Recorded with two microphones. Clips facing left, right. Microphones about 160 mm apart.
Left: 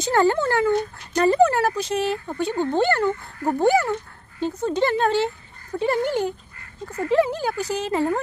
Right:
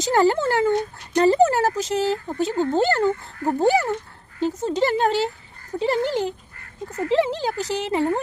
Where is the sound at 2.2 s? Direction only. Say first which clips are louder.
Right 1 dB; 15° right (ahead or behind).